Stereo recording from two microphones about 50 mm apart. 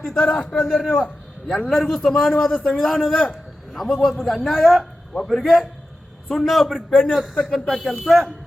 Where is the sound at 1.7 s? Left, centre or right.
Centre.